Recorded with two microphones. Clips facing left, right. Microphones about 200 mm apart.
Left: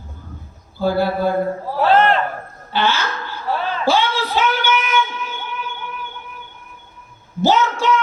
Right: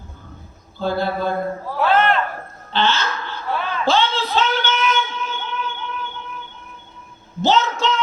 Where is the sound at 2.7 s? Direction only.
10° left (ahead or behind).